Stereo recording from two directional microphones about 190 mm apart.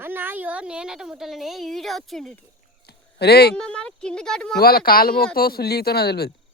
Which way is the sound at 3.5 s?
5° left (ahead or behind).